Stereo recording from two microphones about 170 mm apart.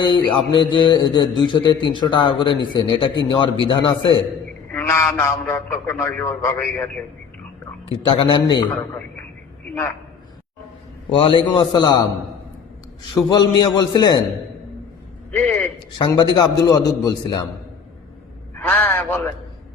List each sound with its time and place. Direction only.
0.0 s a man's voice: 30° left (ahead or behind)
4.7 s a man's voice: 15° left (ahead or behind)
7.9 s a man's voice: 30° left (ahead or behind)
11.1 s a man's voice: 30° left (ahead or behind)
13.3 s a man's voice: 25° left (ahead or behind)
15.3 s a man's voice: 10° left (ahead or behind)
16.0 s a man's voice: 25° left (ahead or behind)
18.5 s a man's voice: 10° left (ahead or behind)